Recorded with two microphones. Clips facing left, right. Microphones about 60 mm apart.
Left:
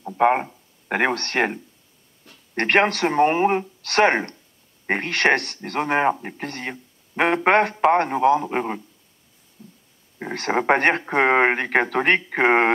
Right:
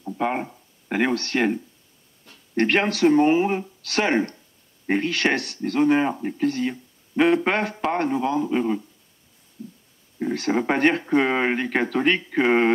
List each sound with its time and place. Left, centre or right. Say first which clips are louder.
0.2 s speech: left 7 dB; left
2.5 s speech: left 2 dB; left
3.1 s speech: right 1 dB; left
3.3 s speech: left 2 dB; left
10.3 s speech: left 3 dB; left